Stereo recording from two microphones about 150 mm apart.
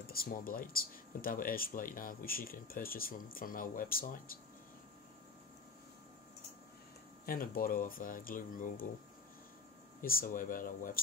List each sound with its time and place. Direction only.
0.0 s speech: 80° left
7.2 s speech: 75° left (ahead or behind)
10.0 s speech: 75° left (ahead or behind)